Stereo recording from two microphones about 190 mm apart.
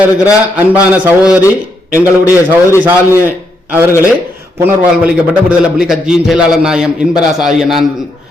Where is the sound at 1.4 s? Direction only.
15° left (ahead or behind).